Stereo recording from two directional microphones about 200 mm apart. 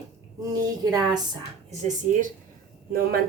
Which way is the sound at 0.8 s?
20° right (ahead or behind).